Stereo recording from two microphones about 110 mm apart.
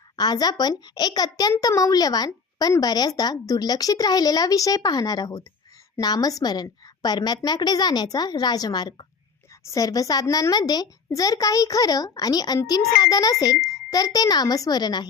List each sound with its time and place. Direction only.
0.2 s a child's voice: 40° left (ahead or behind)